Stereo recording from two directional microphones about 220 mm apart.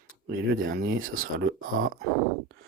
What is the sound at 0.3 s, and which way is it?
Speech, 50° right (ahead or behind).